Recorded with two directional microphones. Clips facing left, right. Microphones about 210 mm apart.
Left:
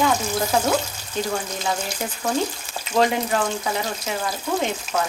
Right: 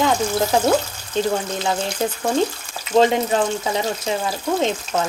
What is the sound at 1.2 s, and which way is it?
Speech, 25° right (ahead or behind).